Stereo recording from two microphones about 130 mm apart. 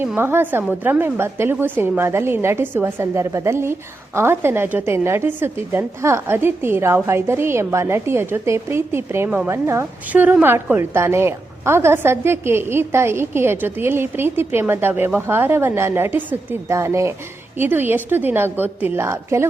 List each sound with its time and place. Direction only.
0.0 s a woman's voice: 15° right (ahead or behind)